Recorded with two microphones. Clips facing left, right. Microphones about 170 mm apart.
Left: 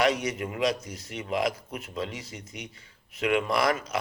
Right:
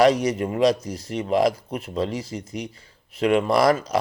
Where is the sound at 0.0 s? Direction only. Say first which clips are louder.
Right 8 dB; 35° right (ahead or behind).